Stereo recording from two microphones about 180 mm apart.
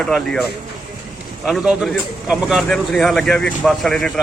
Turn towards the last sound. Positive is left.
turn(degrees=0)  # may be behind; listen again after turning